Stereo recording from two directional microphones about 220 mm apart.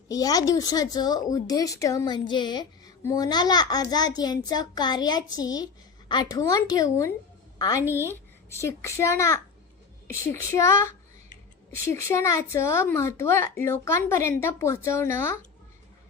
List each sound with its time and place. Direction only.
0.1 s speech: 15° left (ahead or behind)